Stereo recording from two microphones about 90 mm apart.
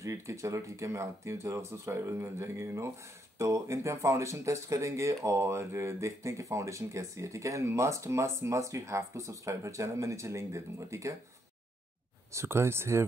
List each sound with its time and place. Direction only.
0.0 s speech: 35° right (ahead or behind)
12.3 s speech: 30° right (ahead or behind)